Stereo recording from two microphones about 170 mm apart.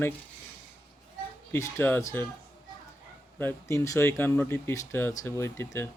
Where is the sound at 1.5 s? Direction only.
15° left (ahead or behind).